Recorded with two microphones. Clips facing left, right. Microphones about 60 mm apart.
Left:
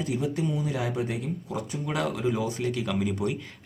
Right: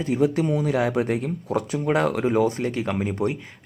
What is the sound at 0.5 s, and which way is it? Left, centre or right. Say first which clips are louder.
Speech: right 7 dB; right.